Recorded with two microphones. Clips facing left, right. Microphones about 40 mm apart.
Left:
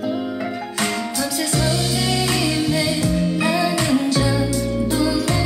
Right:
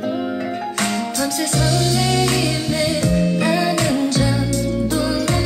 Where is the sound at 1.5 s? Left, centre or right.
Left.